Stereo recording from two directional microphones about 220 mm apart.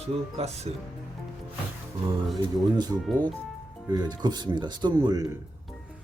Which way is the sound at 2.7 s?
20° right (ahead or behind).